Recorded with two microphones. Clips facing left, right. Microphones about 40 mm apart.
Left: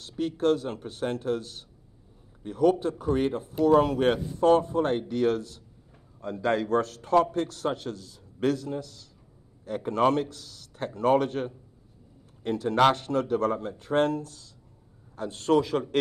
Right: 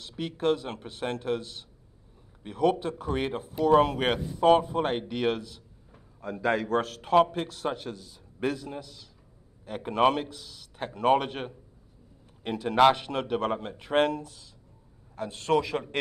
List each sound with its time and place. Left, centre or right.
0.1 s a man's voice: centre
10.1 s a man's voice: centre